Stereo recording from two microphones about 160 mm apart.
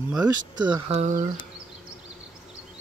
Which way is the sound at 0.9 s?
45° right (ahead or behind).